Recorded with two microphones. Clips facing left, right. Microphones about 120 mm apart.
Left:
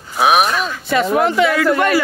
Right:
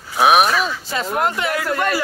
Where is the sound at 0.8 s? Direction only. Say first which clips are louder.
Left 6 dB; 70° left (ahead or behind).